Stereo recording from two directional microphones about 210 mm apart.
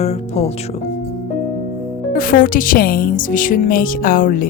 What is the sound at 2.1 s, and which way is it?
Speech, 40° left (ahead or behind).